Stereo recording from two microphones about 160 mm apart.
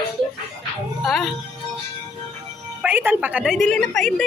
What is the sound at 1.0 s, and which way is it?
Speech, centre (ahead or behind).